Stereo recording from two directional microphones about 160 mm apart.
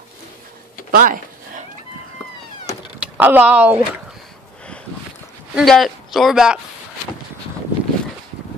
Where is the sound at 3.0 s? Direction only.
10° right (ahead or behind).